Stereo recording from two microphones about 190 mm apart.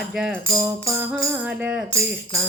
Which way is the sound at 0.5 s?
15° right (ahead or behind).